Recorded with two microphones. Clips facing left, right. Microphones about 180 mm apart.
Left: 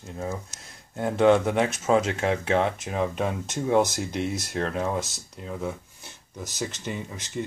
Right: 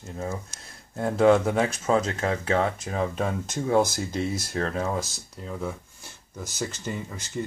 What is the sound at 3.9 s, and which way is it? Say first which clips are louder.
Speech: even; centre (ahead or behind).